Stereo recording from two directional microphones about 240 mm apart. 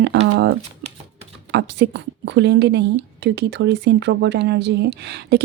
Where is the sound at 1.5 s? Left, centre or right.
Right.